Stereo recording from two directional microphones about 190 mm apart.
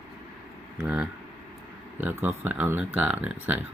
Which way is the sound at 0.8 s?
5° right (ahead or behind).